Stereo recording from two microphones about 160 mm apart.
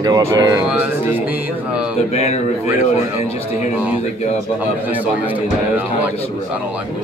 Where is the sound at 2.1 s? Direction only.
45° left (ahead or behind).